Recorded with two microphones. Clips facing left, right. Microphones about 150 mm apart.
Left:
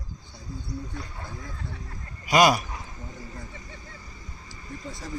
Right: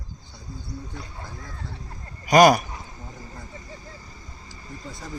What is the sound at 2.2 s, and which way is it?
Speech, 45° right (ahead or behind).